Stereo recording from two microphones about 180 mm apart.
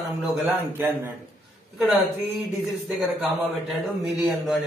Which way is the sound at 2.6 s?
Centre (ahead or behind).